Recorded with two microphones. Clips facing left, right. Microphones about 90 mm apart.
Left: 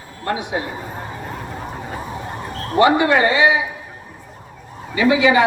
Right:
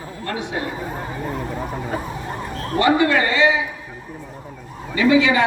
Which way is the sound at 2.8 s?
20° left (ahead or behind).